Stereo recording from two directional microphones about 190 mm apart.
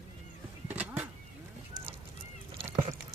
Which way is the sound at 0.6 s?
10° right (ahead or behind).